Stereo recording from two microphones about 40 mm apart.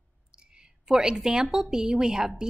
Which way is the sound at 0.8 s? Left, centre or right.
Centre.